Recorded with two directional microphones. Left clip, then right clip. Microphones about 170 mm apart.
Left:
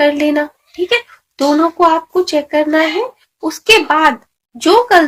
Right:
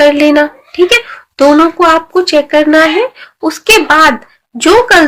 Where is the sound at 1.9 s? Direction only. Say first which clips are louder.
Right 5 dB; 25° right (ahead or behind).